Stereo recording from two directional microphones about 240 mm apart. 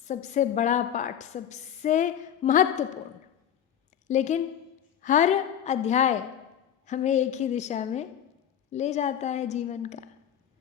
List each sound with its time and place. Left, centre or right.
0.0 s a woman's voice: left
4.0 s a woman's voice: left